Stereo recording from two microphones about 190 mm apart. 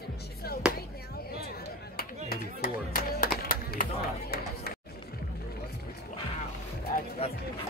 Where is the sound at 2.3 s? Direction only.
50° left (ahead or behind).